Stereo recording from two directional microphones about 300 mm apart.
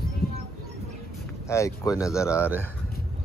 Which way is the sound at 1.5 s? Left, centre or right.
Centre.